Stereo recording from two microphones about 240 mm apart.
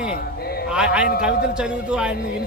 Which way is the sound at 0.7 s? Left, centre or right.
Centre.